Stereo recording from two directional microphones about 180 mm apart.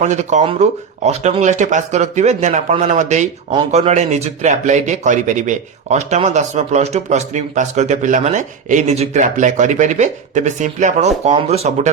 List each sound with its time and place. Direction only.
0.0 s a man's voice: 40° right (ahead or behind)